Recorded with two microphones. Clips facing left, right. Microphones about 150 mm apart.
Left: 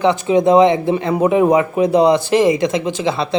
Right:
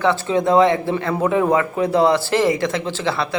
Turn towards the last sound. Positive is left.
turn(degrees=15)  # may be behind; listen again after turning